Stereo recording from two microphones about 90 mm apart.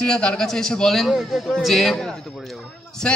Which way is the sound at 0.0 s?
10° left (ahead or behind).